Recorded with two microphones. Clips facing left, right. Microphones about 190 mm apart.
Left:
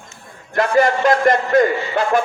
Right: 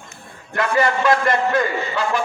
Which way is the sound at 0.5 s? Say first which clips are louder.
Left 4 dB; 40° left (ahead or behind).